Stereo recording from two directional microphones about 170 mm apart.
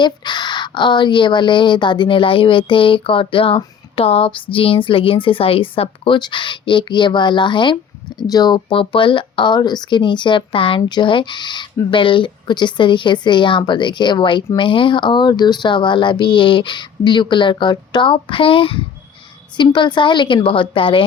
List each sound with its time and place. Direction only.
0.0 s speech: 25° left (ahead or behind)